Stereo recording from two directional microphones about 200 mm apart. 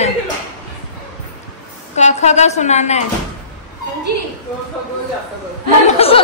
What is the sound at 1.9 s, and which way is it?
A woman's voice, 35° left (ahead or behind).